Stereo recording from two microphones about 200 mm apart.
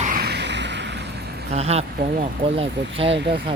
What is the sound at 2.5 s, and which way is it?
Speech, 30° right (ahead or behind).